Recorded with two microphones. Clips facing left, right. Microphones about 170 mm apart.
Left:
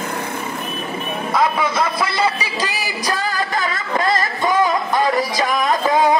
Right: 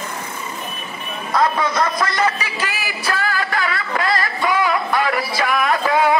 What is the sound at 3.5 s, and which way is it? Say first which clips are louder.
Music: left 1 dB; 20° left (ahead or behind).